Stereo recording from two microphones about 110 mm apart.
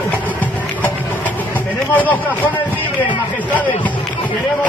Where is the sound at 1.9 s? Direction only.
15° left (ahead or behind).